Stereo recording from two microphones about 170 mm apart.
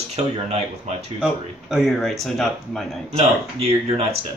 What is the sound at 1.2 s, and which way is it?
Speech, 5° right (ahead or behind).